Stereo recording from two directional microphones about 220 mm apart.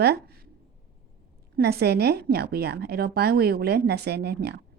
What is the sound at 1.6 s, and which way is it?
A woman's voice, 45° right (ahead or behind).